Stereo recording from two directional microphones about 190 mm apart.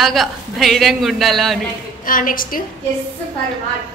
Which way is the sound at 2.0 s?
45° left (ahead or behind).